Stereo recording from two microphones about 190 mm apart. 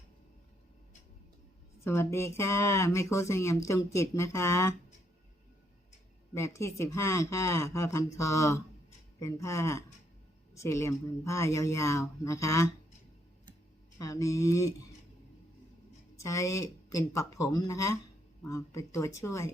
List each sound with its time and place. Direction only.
1.8 s speech: 15° left (ahead or behind)
6.3 s speech: 15° left (ahead or behind)
14.0 s speech: 15° left (ahead or behind)
16.1 s speech: 15° left (ahead or behind)